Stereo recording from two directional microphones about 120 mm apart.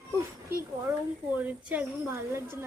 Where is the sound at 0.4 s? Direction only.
15° right (ahead or behind).